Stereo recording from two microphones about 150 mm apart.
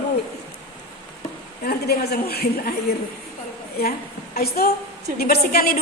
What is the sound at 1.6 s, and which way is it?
A woman's voice, 90° left.